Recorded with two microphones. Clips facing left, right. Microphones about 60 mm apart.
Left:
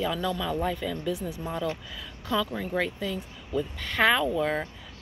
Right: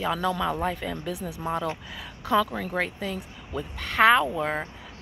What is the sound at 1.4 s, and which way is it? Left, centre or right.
Speech, right.